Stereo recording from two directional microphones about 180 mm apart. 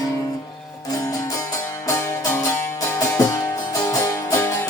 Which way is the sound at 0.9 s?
20° left (ahead or behind).